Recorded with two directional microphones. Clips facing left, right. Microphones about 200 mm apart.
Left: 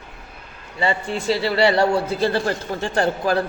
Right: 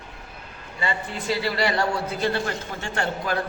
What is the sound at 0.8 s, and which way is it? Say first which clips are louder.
A man's voice: left 6 dB; 30° left (ahead or behind).